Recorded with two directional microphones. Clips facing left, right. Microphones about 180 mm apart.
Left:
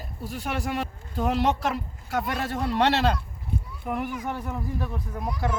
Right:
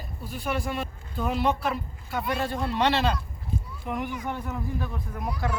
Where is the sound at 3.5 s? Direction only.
65° left (ahead or behind).